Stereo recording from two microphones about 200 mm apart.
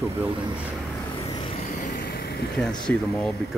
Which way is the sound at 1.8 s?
40° left (ahead or behind).